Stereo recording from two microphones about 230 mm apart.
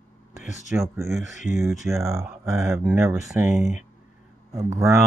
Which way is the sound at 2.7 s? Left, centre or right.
Centre.